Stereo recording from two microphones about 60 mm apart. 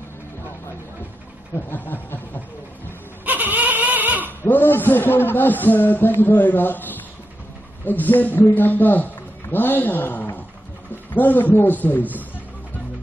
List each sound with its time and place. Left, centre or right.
1.5 s a man's voice: left
3.3 s a sound: right
4.4 s a man's voice: left